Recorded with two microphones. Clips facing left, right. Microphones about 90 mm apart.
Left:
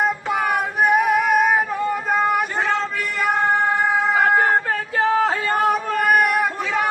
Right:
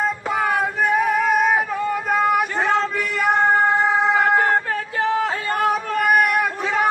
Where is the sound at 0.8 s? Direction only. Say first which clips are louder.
Left 4 dB; 15° left (ahead or behind); by 3.3 s centre (ahead or behind).